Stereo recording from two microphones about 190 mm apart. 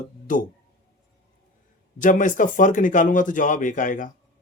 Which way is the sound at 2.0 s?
45° left (ahead or behind).